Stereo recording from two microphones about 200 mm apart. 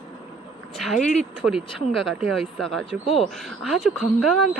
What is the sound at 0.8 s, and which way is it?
Speech, centre (ahead or behind).